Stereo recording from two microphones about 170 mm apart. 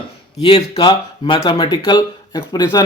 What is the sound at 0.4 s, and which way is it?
Speech, 30° left (ahead or behind).